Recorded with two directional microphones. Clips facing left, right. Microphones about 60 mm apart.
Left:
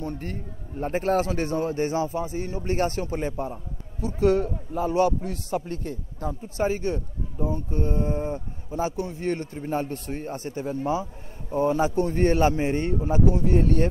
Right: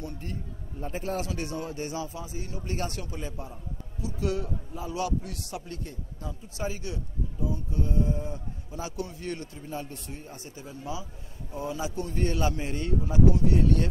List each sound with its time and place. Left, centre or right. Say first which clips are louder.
0.0 s a man's voice: left 5 dB; left